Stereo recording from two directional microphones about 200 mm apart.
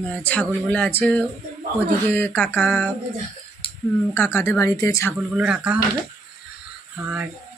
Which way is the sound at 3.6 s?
25° left (ahead or behind).